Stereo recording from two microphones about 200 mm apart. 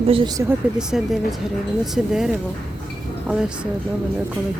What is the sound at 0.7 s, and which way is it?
Speech, centre (ahead or behind).